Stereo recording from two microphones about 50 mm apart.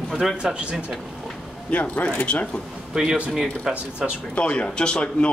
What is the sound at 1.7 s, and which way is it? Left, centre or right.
Speech, left.